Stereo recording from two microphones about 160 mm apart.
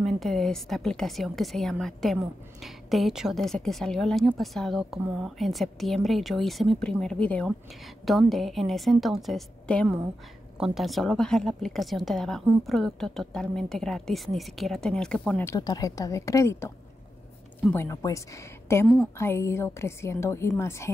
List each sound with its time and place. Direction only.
0.0 s speech: centre (ahead or behind)
15.6 s a woman's voice: 25° left (ahead or behind)
17.7 s a woman's voice: 20° left (ahead or behind)